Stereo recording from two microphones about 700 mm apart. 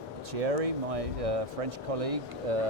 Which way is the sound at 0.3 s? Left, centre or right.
Right.